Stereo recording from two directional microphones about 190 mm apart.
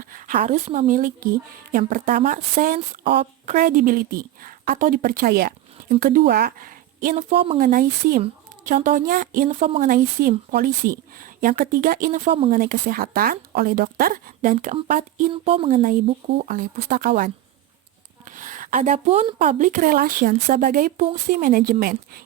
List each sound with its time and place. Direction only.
0.0 s a sound: 45° right (ahead or behind)
0.3 s a woman's voice: 35° right (ahead or behind)
7.6 s a woman's voice: 45° right (ahead or behind)
9.8 s a woman's voice: 45° right (ahead or behind)
12.5 s a woman's voice: 45° right (ahead or behind)
15.3 s speech: 30° right (ahead or behind)
16.4 s a woman's voice: 45° right (ahead or behind)
18.3 s a sound: 45° right (ahead or behind)
19.4 s a woman's voice: 45° right (ahead or behind)